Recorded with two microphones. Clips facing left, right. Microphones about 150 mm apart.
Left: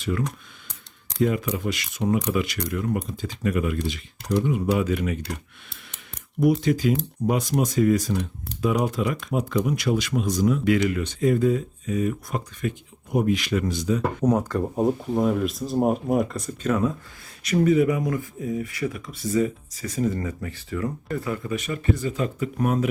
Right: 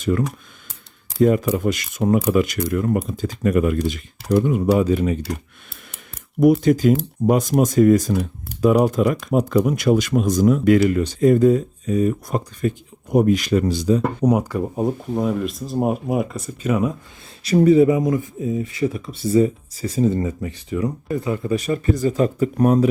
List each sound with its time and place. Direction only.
0.0 s speech: 45° right (ahead or behind)
6.4 s speech: 50° right (ahead or behind); by 14.0 s 35° right (ahead or behind)
14.3 s speech: 10° right (ahead or behind)
17.4 s speech: 30° right (ahead or behind)
21.4 s speech: 35° right (ahead or behind)